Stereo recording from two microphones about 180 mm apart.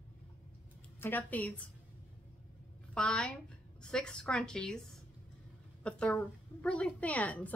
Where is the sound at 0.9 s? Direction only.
10° left (ahead or behind).